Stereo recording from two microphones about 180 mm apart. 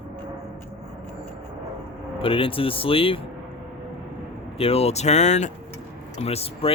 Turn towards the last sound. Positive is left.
turn(degrees=35)  # may be behind; listen again after turning